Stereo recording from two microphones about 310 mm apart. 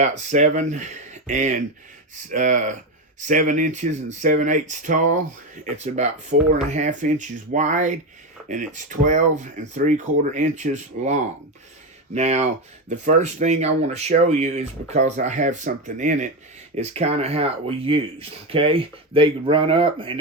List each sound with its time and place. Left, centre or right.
0.0 s speech: right